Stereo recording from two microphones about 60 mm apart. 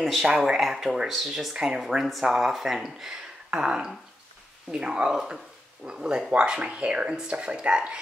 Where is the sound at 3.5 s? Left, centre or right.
Centre.